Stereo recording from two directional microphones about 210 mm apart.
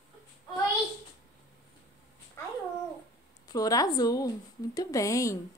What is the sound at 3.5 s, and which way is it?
A woman's voice, 15° left (ahead or behind).